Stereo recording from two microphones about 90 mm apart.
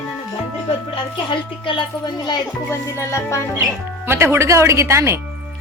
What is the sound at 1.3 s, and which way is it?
Speech, 65° left (ahead or behind).